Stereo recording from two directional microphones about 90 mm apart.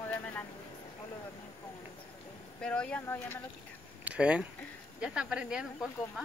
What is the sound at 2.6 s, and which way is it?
Speech, 10° left (ahead or behind).